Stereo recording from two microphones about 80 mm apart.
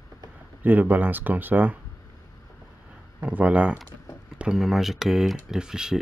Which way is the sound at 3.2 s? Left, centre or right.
Centre.